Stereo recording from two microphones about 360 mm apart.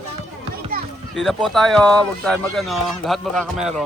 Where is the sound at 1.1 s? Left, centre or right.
Centre.